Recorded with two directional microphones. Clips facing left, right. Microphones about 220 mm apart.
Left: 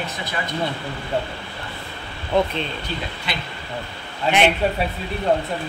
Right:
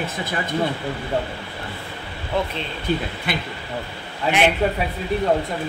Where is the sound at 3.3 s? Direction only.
50° right (ahead or behind).